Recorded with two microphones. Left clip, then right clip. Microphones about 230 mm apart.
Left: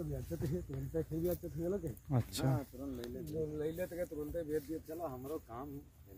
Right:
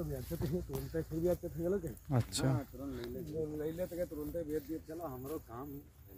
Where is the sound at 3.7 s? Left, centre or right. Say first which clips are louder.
Right 1 dB; left.